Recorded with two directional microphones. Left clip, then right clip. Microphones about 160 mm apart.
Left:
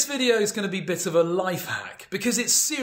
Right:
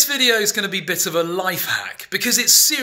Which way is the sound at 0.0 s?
5° left (ahead or behind).